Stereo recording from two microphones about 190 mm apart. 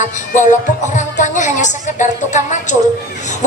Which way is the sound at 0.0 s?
40° left (ahead or behind).